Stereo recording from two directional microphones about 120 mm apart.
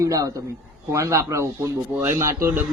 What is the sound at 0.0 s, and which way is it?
A man's voice, 30° right (ahead or behind).